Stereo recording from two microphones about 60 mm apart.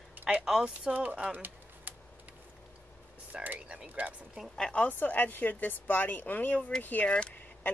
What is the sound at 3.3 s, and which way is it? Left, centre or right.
Speech, right.